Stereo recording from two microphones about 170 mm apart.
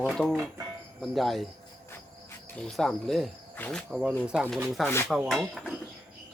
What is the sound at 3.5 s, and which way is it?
Cricket, 5° left (ahead or behind).